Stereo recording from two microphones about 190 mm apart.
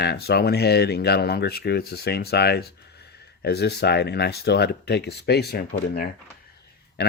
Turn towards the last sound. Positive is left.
turn(degrees=60)  # may be behind; listen again after turning